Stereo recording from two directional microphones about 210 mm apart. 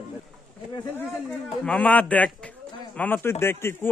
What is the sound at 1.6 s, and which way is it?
Speech, 5° left (ahead or behind).